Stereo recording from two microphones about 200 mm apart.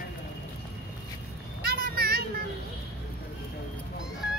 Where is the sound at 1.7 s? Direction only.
50° right (ahead or behind).